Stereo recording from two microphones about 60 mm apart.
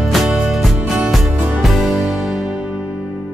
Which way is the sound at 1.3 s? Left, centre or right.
Right.